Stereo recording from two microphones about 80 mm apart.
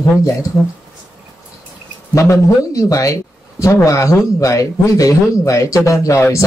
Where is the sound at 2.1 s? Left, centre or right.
Left.